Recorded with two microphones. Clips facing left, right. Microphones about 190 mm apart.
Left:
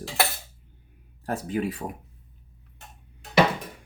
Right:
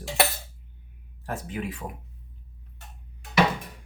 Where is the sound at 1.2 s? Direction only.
40° left (ahead or behind).